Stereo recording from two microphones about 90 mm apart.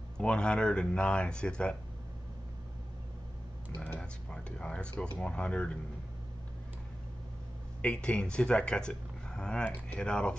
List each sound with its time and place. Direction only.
0.2 s speech: 10° left (ahead or behind)
3.7 s speech: 20° left (ahead or behind)
4.0 s speech: 10° left (ahead or behind)
7.8 s speech: 10° left (ahead or behind)